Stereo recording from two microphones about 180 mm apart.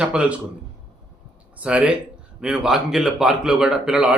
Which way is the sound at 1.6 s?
5° right (ahead or behind).